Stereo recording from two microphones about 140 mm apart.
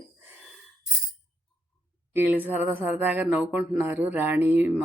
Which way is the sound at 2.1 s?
15° right (ahead or behind).